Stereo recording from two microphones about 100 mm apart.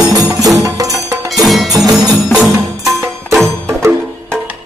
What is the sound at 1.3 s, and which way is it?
Music, centre (ahead or behind).